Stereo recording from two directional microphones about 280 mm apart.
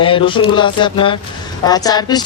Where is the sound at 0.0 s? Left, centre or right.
Centre.